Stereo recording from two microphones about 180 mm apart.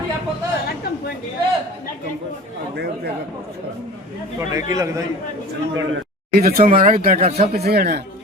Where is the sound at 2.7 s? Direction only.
65° right (ahead or behind).